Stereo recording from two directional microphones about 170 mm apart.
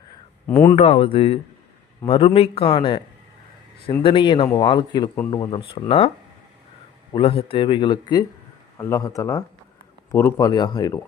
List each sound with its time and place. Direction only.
0.4 s speech: 20° left (ahead or behind)
0.8 s speech: 35° left (ahead or behind)
4.0 s speech: 30° left (ahead or behind)
7.1 s speech: 35° left (ahead or behind)